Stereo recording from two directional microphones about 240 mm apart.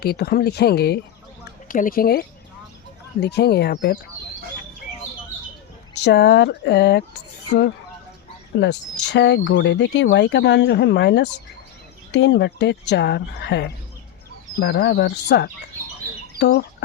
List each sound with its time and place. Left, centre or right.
0.0 s speech: left
5.9 s speech: left
8.5 s speech: left